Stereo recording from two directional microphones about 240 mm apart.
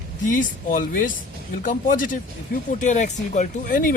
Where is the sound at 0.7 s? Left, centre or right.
Left.